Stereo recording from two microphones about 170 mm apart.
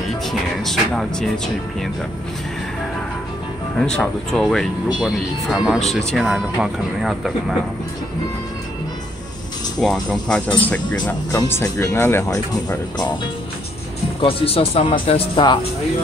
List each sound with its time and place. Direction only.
0.3 s speech: centre (ahead or behind)
3.7 s speech: 5° left (ahead or behind)
9.8 s speech: 5° left (ahead or behind); by 13.1 s 20° left (ahead or behind)
14.2 s speech: 35° left (ahead or behind)